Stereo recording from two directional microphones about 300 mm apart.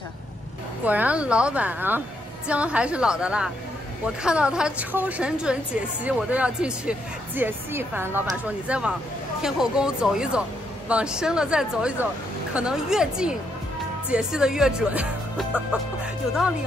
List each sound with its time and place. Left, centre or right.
0.8 s speech: centre